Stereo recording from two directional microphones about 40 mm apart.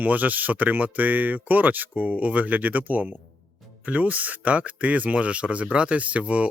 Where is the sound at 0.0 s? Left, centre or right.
Right.